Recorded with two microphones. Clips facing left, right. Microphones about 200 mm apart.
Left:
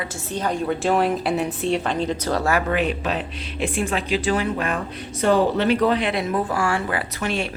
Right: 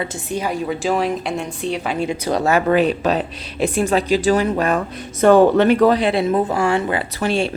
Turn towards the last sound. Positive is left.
turn(degrees=-30)  # may be behind; listen again after turning